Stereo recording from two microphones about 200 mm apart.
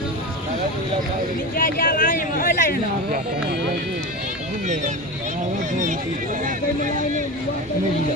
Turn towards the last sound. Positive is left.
turn(degrees=-40)  # may be behind; listen again after turning